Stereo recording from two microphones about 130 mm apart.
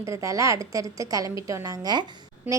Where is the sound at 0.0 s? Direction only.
25° right (ahead or behind).